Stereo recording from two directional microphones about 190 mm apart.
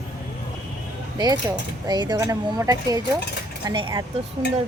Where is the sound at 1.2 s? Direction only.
20° right (ahead or behind).